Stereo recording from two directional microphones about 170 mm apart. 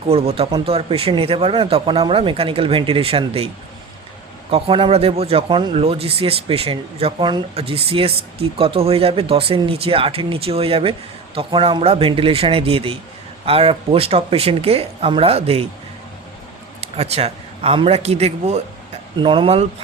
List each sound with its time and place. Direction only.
0.1 s speech: 35° right (ahead or behind)
4.5 s speech: 35° right (ahead or behind)
16.8 s speech: 35° right (ahead or behind)